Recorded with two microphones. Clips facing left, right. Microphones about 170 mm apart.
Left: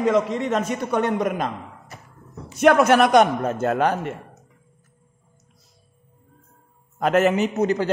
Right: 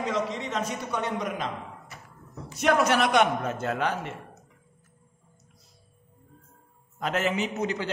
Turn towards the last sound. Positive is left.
turn(degrees=45)  # may be behind; listen again after turning